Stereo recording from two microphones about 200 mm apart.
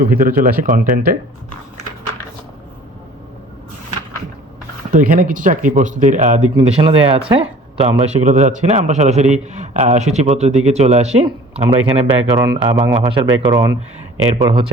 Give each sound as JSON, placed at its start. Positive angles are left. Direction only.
{"t": 0.0, "sound": "speech", "side_deg": -45}
{"t": 4.9, "sound": "speech", "side_deg": -45}